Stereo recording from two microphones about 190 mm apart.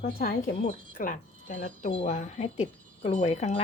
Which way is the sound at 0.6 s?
45° left (ahead or behind).